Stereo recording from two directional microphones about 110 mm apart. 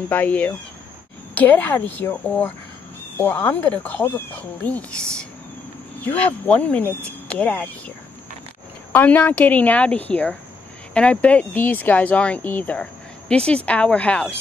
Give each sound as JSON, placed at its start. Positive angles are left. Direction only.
{"t": 0.1, "sound": "speech", "side_deg": 15}
{"t": 8.9, "sound": "speech", "side_deg": 15}